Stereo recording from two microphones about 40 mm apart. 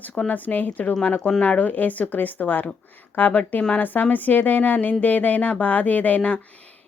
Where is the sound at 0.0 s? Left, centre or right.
Left.